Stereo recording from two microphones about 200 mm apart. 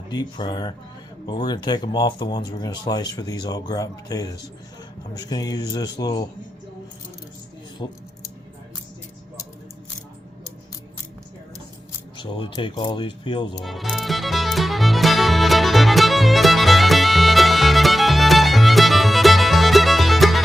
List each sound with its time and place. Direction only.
0.1 s speech: 20° left (ahead or behind)
7.8 s speech: 25° left (ahead or behind)
12.1 s speech: 25° left (ahead or behind)
13.6 s music: centre (ahead or behind)